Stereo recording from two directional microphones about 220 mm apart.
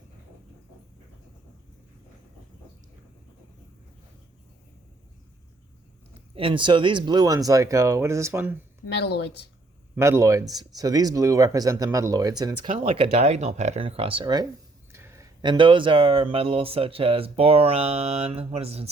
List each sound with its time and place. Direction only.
6.3 s speech: 25° right (ahead or behind)
9.0 s speech: 50° left (ahead or behind)
9.9 s speech: 10° right (ahead or behind)
12.6 s speech: 30° right (ahead or behind)